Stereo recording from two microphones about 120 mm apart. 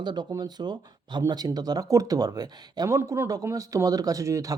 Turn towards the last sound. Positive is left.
turn(degrees=-30)  # may be behind; listen again after turning